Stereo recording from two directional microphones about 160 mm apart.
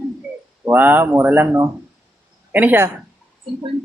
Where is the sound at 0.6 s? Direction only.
10° right (ahead or behind).